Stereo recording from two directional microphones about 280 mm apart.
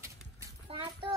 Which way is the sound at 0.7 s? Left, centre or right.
Right.